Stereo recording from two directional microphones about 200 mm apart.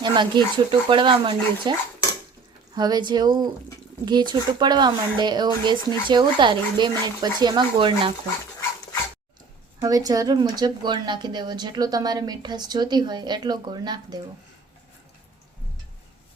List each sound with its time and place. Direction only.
0.0 s speech: 20° right (ahead or behind)
2.7 s speech: 20° right (ahead or behind)
9.8 s speech: 20° right (ahead or behind)